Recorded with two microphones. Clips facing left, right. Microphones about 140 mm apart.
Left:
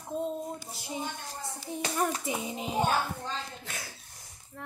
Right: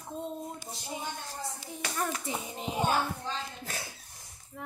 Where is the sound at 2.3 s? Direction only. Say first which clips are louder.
Left 3 dB; 15° left (ahead or behind).